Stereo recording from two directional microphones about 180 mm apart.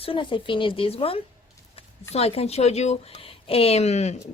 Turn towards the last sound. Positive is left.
turn(degrees=40)  # may be behind; listen again after turning